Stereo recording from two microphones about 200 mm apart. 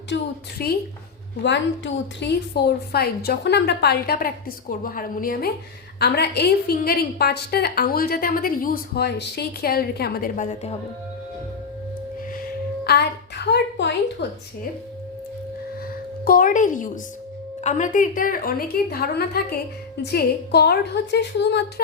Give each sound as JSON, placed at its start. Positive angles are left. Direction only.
{"t": 0.1, "sound": "a woman's voice", "side_deg": 65}
{"t": 0.6, "sound": "a woman's voice", "side_deg": 50}
{"t": 12.8, "sound": "a woman's voice", "side_deg": 55}
{"t": 16.2, "sound": "a woman's voice", "side_deg": 45}